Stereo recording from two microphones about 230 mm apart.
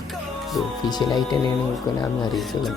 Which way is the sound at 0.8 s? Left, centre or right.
Centre.